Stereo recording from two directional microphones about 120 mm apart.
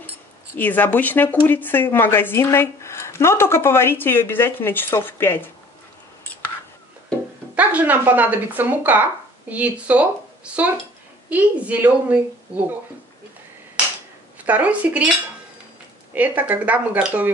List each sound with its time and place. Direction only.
0.6 s speech: 15° left (ahead or behind)
7.5 s a woman's voice: 15° right (ahead or behind)
14.4 s a woman's voice: 10° right (ahead or behind)
16.2 s a woman's voice: 15° right (ahead or behind)